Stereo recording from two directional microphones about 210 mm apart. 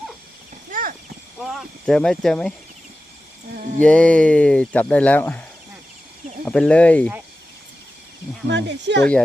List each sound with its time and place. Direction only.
0.7 s clip-clop: 40° right (ahead or behind)
1.4 s speech: centre (ahead or behind)
3.8 s speech: 5° left (ahead or behind)
8.4 s speech: 55° right (ahead or behind)